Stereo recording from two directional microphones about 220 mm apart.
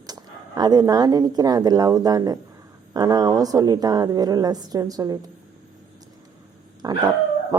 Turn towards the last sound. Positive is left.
turn(degrees=-15)  # may be behind; listen again after turning